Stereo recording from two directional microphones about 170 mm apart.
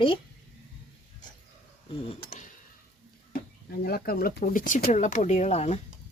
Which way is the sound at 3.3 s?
60° left (ahead or behind).